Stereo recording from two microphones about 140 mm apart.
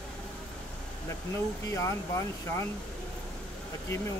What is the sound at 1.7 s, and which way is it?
Speech, 20° left (ahead or behind).